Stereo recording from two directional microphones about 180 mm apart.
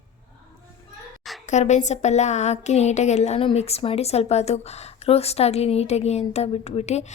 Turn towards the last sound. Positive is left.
turn(degrees=40)  # may be behind; listen again after turning